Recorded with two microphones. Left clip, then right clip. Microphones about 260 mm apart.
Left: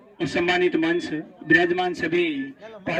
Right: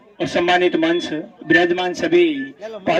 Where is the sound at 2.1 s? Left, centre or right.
Right.